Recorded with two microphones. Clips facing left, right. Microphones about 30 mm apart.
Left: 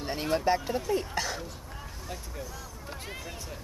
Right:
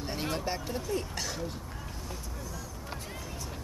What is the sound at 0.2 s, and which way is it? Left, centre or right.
Speech, centre.